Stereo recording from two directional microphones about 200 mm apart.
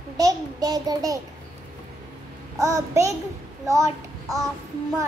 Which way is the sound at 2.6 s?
15° right (ahead or behind).